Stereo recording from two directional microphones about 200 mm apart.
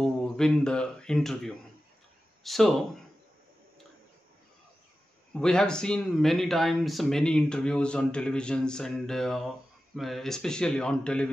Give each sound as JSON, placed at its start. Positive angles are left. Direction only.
{"t": 0.0, "sound": "speech", "side_deg": 5}
{"t": 5.3, "sound": "speech", "side_deg": 5}